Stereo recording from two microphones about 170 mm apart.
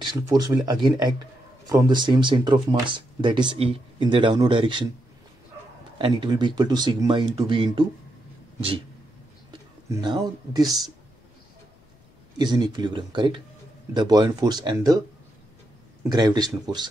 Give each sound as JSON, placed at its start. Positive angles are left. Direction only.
{"t": 0.0, "sound": "speech", "side_deg": -25}
{"t": 5.9, "sound": "speech", "side_deg": -30}
{"t": 8.5, "sound": "a sound", "side_deg": -30}
{"t": 9.5, "sound": "speech", "side_deg": -25}
{"t": 12.4, "sound": "speech", "side_deg": -25}
{"t": 16.1, "sound": "speech", "side_deg": -25}